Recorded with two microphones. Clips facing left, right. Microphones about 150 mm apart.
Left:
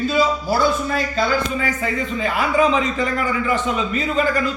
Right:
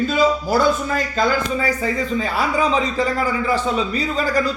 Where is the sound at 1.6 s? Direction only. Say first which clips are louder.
Right 2 dB; 35° right (ahead or behind).